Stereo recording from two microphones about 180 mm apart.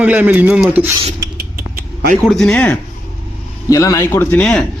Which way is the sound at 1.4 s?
60° right (ahead or behind).